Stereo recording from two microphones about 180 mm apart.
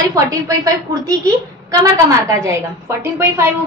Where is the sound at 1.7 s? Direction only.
15° right (ahead or behind).